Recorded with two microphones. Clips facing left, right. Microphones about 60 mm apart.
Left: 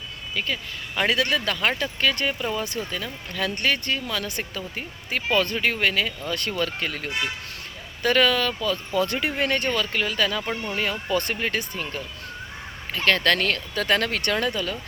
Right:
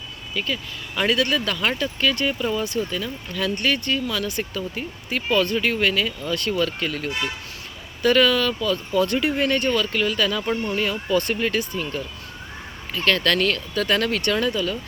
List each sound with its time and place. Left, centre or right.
0.3 s speech: left
8.0 s speech: left
10.8 s speech: left
13.1 s speech: left